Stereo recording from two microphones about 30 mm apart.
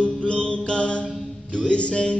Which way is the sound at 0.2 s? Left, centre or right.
Left.